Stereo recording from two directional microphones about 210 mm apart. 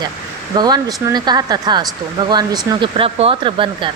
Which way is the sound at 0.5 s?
20° right (ahead or behind).